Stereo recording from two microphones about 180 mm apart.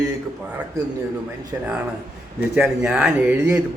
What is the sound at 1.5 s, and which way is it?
A man's voice, 15° right (ahead or behind).